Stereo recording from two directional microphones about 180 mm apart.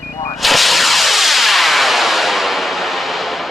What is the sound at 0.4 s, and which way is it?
Music, centre (ahead or behind).